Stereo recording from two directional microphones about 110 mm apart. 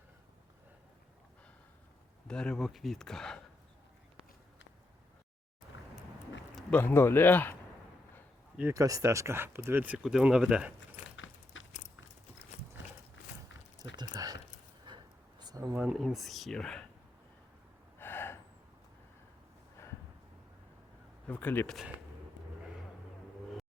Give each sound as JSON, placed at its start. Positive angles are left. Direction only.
{"t": 2.2, "sound": "speech", "side_deg": 5}
{"t": 6.7, "sound": "speech", "side_deg": 20}
{"t": 8.7, "sound": "speech", "side_deg": -30}
{"t": 13.9, "sound": "speech", "side_deg": -35}
{"t": 14.8, "sound": "a sound", "side_deg": -40}
{"t": 15.8, "sound": "speech", "side_deg": -5}
{"t": 17.9, "sound": "gasp", "side_deg": 20}
{"t": 21.2, "sound": "speech", "side_deg": 15}